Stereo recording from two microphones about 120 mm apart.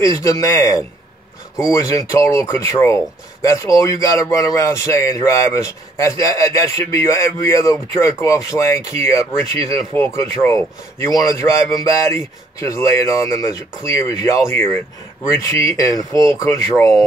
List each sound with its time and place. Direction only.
0.0 s speech: 25° left (ahead or behind)